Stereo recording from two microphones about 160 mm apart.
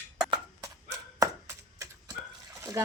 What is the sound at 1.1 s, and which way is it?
Chopping, 20° right (ahead or behind).